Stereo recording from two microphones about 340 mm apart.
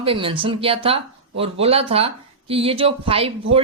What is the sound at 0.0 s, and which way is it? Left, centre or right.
Speech, centre.